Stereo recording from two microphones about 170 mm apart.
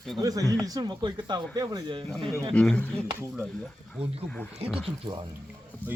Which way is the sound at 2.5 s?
5° left (ahead or behind).